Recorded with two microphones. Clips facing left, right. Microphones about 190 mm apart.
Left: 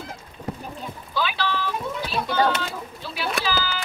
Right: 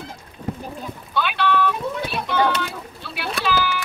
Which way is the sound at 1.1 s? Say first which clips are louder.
Right 5 dB; 60° right (ahead or behind).